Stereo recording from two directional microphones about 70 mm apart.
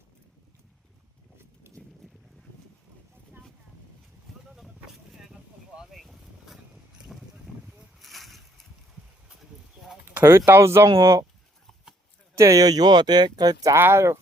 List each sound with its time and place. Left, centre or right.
1.4 s horse: right
5.3 s a sound: centre
5.9 s vehicle: centre
8.0 s a sound: centre
10.2 s speech: right
10.8 s speech: right
12.3 s speech: right
13.7 s speech: right